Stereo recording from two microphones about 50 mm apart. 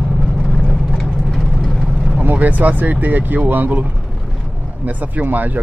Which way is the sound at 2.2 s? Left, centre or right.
Right.